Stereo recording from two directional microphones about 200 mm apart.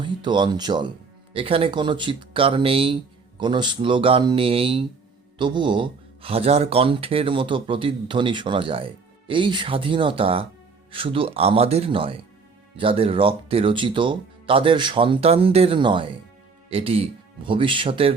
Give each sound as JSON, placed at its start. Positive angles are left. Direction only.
{"t": 0.0, "sound": "speech", "side_deg": -25}